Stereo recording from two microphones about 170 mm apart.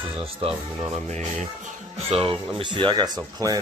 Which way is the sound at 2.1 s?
35° right (ahead or behind).